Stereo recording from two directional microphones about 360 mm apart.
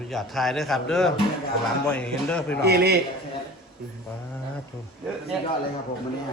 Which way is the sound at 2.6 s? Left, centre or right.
Right.